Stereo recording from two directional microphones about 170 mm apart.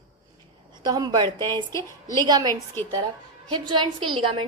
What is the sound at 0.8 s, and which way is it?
A woman's voice, 25° right (ahead or behind).